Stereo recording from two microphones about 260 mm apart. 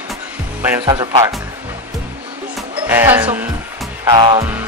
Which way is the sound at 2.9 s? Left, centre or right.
Centre.